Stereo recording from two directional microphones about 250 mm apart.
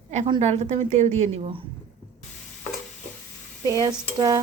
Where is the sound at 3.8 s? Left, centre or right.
Centre.